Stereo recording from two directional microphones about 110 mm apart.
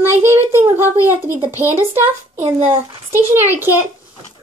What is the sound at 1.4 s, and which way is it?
Speech, 20° right (ahead or behind).